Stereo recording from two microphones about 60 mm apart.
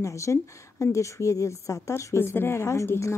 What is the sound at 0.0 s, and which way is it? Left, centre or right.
Speech, left.